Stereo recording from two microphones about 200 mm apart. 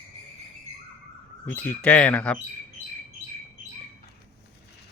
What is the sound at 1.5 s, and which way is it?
Speech, 5° left (ahead or behind).